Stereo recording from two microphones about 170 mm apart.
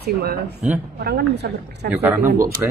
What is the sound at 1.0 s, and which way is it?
Speech, 75° right (ahead or behind).